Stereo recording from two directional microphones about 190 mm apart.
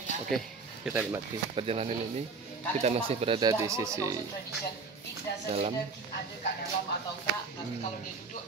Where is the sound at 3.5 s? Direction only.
15° right (ahead or behind).